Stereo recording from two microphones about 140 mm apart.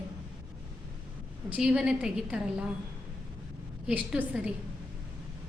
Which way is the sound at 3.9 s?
10° right (ahead or behind).